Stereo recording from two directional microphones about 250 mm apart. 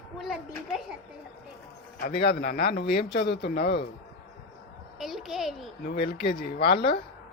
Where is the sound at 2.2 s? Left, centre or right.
Left.